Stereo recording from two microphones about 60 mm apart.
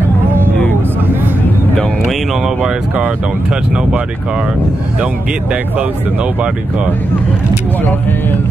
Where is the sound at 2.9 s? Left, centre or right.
Right.